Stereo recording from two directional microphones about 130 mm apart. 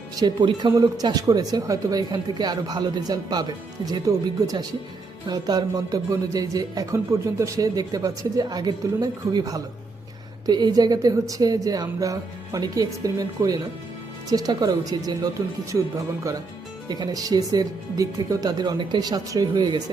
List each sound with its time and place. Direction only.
0.2 s speech: 35° right (ahead or behind)
16.9 s speech: 30° right (ahead or behind)